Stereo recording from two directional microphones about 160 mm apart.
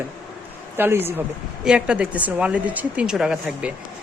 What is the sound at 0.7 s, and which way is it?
A woman's voice, 15° right (ahead or behind).